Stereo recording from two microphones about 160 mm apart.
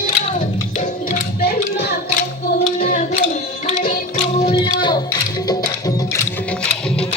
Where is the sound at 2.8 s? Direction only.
50° left (ahead or behind).